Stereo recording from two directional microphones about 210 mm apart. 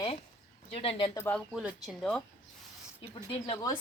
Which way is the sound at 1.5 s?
Centre (ahead or behind).